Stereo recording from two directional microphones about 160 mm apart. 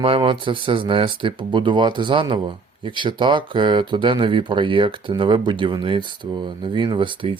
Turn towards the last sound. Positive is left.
turn(degrees=-30)  # may be behind; listen again after turning